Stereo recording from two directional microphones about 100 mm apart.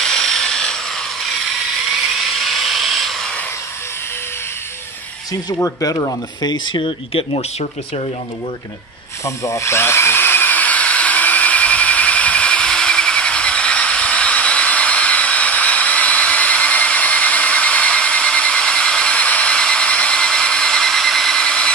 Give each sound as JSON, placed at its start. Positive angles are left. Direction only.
{"t": 0.0, "sound": "wood", "side_deg": 5}
{"t": 2.3, "sound": "a sound", "side_deg": 0}
{"t": 6.4, "sound": "speech", "side_deg": 50}
{"t": 9.2, "sound": "drill", "side_deg": 30}